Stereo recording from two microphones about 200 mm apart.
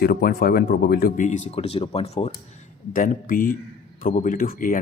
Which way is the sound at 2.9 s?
40° left (ahead or behind).